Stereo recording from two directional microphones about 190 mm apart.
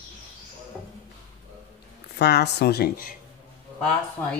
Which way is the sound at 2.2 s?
60° left (ahead or behind).